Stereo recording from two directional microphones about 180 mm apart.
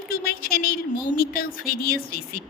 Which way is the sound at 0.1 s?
55° left (ahead or behind).